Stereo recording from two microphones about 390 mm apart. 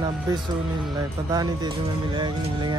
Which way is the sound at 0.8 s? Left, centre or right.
Centre.